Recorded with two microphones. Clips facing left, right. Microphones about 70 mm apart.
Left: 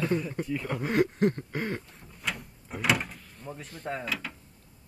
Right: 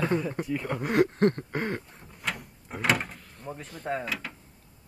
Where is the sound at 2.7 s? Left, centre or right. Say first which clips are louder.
Right 1 dB; right.